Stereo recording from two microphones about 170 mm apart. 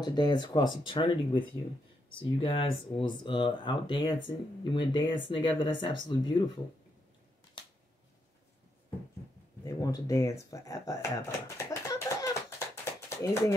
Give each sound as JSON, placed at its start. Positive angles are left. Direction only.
{"t": 0.0, "sound": "speech", "side_deg": 25}
{"t": 9.7, "sound": "speech", "side_deg": 20}